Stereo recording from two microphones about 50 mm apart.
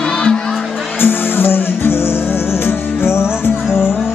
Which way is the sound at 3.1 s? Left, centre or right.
Left.